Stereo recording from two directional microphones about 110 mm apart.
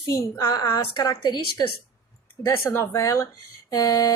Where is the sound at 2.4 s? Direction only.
25° left (ahead or behind).